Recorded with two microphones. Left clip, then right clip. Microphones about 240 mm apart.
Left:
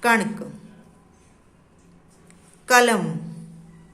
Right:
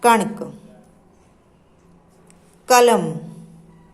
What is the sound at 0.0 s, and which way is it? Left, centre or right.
Mantra, centre.